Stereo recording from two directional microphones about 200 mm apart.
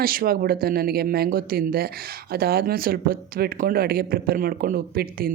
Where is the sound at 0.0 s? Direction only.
45° right (ahead or behind).